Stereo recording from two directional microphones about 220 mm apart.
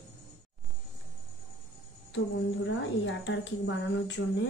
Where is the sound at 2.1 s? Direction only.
55° left (ahead or behind).